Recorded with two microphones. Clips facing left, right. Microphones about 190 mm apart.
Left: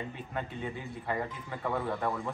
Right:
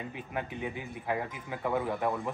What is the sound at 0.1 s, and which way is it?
A man's voice, 10° right (ahead or behind).